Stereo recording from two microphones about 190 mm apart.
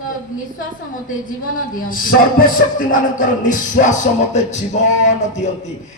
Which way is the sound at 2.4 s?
45° left (ahead or behind).